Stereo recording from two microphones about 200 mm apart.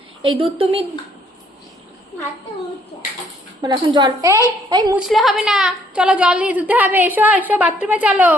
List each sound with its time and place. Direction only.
0.2 s a woman's voice: 25° right (ahead or behind)
3.6 s a woman's voice: 20° right (ahead or behind)
4.9 s a woman's voice: centre (ahead or behind)